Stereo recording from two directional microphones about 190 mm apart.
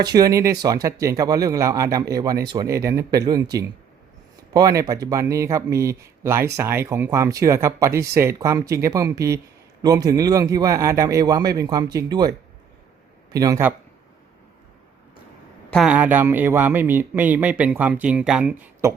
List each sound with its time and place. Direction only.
0.2 s a man's voice: 15° right (ahead or behind)
13.3 s speech: 20° right (ahead or behind)
15.7 s speech: 5° right (ahead or behind)